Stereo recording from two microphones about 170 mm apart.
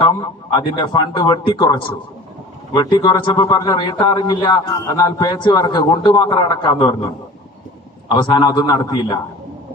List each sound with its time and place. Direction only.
0.0 s a man's voice: 25° left (ahead or behind)
8.3 s a man's voice: 30° left (ahead or behind)